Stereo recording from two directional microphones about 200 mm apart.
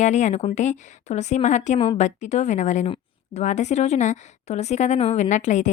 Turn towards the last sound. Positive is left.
turn(degrees=35)  # may be behind; listen again after turning